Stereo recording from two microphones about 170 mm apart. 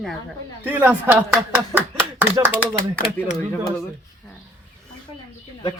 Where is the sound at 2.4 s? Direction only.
20° right (ahead or behind).